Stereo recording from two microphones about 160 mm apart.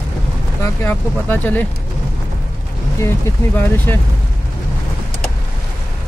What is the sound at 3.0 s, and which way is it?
Speech, 15° left (ahead or behind).